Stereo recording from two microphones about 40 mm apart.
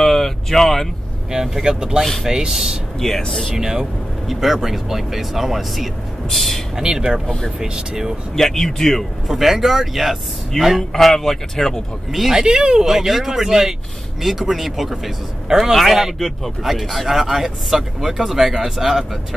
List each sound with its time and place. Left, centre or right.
0.0 s speech: centre
1.3 s speech: centre
3.0 s speech: centre
3.5 s speech: centre
4.3 s speech: centre
6.8 s speech: centre
8.4 s speech: centre
9.3 s speech: centre
10.8 s speech: centre
12.1 s speech: centre
12.4 s speech: right
12.8 s speech: centre